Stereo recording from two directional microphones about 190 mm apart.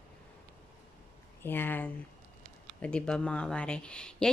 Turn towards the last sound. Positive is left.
turn(degrees=5)  # may be behind; listen again after turning